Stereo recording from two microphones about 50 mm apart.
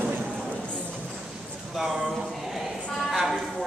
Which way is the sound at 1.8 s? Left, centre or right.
Centre.